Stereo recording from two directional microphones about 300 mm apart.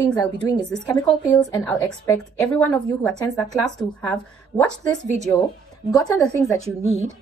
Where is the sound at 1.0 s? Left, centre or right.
Centre.